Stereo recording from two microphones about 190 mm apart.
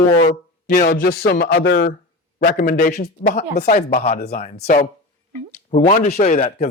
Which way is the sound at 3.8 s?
55° left (ahead or behind).